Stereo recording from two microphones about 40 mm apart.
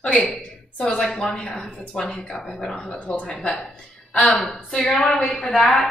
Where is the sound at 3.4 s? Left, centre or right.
Centre.